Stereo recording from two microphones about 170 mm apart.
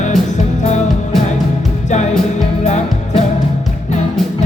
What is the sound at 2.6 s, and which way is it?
Music, 45° left (ahead or behind).